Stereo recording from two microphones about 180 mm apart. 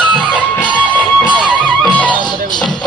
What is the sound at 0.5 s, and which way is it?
Music, 10° left (ahead or behind).